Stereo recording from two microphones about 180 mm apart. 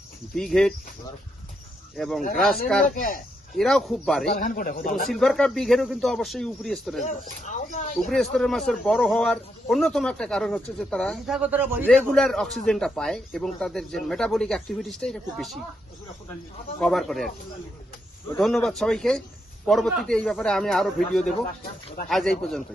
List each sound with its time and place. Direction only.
0.3 s a man's voice: centre (ahead or behind)
2.0 s a man's voice: centre (ahead or behind)
2.9 s speech: 50° left (ahead or behind)
3.6 s a man's voice: centre (ahead or behind)
4.4 s speech: 50° left (ahead or behind)
5.0 s a man's voice: centre (ahead or behind)
7.0 s speech: 45° left (ahead or behind)
7.9 s a man's voice: centre (ahead or behind)
11.4 s a man's voice: 10° right (ahead or behind)
11.9 s a man's voice: centre (ahead or behind)
16.8 s a man's voice: centre (ahead or behind)
18.3 s a man's voice: centre (ahead or behind)